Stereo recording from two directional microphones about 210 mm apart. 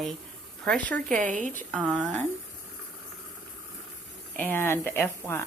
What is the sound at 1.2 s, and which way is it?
Speech, 40° right (ahead or behind).